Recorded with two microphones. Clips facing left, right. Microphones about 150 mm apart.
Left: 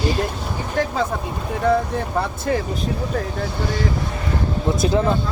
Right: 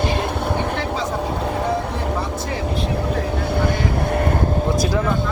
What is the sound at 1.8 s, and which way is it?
Vehicle, 70° right (ahead or behind).